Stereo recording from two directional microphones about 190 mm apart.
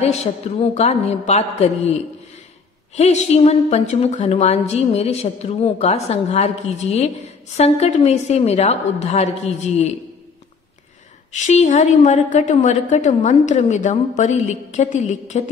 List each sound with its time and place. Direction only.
0.0 s a woman's voice: 35° left (ahead or behind)
3.0 s a woman's voice: 35° left (ahead or behind)
11.3 s a woman's voice: 40° left (ahead or behind)